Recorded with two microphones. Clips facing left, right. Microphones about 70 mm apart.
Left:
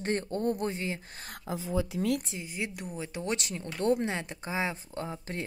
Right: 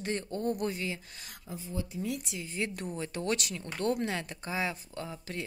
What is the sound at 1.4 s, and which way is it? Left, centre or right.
Speech, left.